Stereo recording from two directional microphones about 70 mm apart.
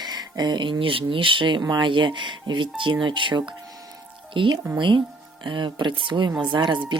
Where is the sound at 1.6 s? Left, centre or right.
Right.